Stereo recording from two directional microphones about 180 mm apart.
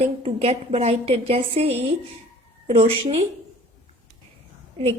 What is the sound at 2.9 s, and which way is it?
Speech, 30° right (ahead or behind).